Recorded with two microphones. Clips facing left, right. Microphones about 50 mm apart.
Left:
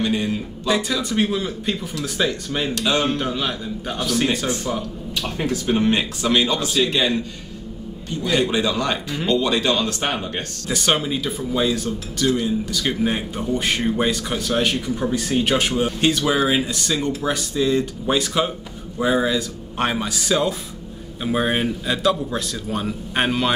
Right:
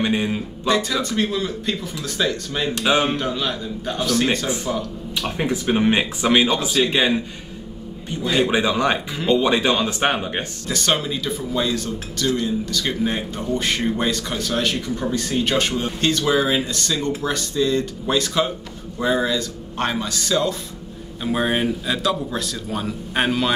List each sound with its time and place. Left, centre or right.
0.0 s speech: centre
0.7 s a man's voice: centre
2.7 s speech: centre
3.2 s a man's voice: centre
5.1 s speech: centre
10.7 s a man's voice: centre